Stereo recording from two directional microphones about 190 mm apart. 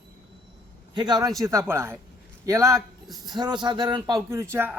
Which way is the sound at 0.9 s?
20° right (ahead or behind).